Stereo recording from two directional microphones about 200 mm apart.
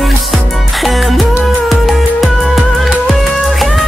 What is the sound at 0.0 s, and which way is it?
Music, centre (ahead or behind).